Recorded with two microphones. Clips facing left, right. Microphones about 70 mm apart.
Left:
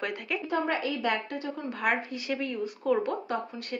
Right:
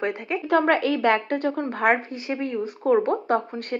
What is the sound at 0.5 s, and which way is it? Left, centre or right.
A woman's voice, right.